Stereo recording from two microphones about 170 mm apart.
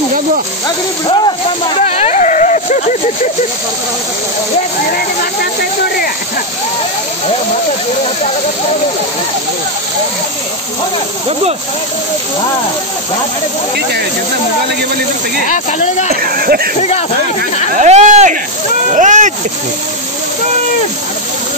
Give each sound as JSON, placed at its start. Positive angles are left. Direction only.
{"t": 1.0, "sound": "speech", "side_deg": 30}
{"t": 1.8, "sound": "a sound", "side_deg": 40}
{"t": 15.4, "sound": "speech", "side_deg": 45}
{"t": 16.1, "sound": "speech", "side_deg": -60}
{"t": 17.7, "sound": "speech", "side_deg": -45}